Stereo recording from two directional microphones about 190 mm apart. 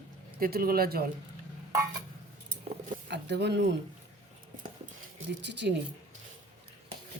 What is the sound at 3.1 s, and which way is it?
Speech, 65° right (ahead or behind).